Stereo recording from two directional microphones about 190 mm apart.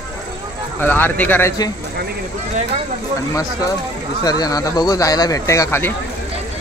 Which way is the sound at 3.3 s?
15° left (ahead or behind).